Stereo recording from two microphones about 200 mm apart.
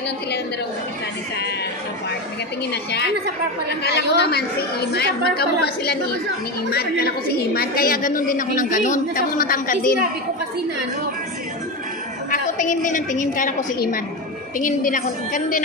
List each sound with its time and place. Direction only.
2.7 s a woman's voice: 55° left (ahead or behind); by 9.9 s 40° left (ahead or behind)
12.3 s a woman's voice: 40° left (ahead or behind)